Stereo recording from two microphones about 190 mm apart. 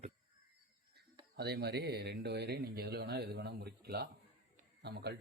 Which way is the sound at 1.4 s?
60° right (ahead or behind).